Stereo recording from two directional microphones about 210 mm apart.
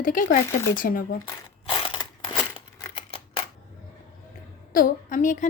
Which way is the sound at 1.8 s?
25° left (ahead or behind).